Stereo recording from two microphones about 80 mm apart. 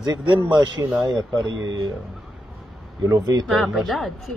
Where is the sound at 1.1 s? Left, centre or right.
Right.